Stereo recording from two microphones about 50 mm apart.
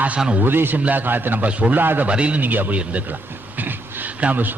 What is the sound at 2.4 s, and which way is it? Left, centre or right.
Speech, right.